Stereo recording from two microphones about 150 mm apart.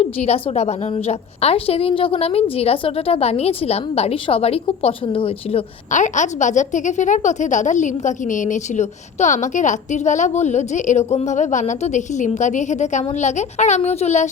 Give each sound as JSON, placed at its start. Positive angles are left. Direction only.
{"t": 0.0, "sound": "a woman's voice", "side_deg": 45}
{"t": 5.9, "sound": "a woman's voice", "side_deg": 55}